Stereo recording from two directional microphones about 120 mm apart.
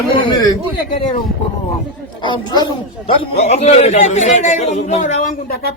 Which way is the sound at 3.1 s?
65° left (ahead or behind).